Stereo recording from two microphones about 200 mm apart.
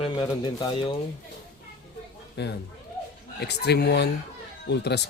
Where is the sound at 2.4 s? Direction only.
60° left (ahead or behind).